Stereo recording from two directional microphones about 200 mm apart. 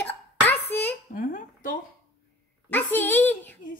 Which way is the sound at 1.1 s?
45° left (ahead or behind).